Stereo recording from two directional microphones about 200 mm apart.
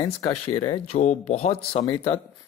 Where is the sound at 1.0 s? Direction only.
35° left (ahead or behind).